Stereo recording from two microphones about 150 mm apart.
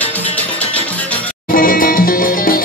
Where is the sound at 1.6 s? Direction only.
70° left (ahead or behind).